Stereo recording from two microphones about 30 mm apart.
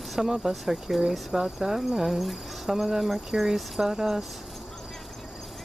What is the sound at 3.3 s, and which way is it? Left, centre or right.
Speech, right.